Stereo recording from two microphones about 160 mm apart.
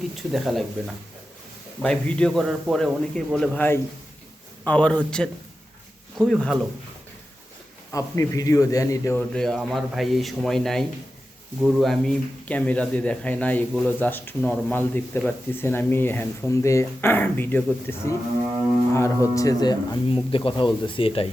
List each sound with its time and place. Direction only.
0.2 s a man's voice: centre (ahead or behind)
1.8 s a man's voice: 5° left (ahead or behind)
7.9 s speech: 20° left (ahead or behind)
9.3 s a man's voice: 5° left (ahead or behind); by 21.2 s 35° left (ahead or behind)